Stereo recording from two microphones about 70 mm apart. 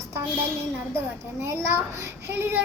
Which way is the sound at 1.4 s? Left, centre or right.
Right.